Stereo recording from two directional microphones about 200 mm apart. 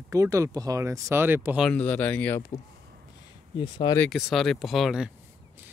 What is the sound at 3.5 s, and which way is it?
Speech, 20° left (ahead or behind).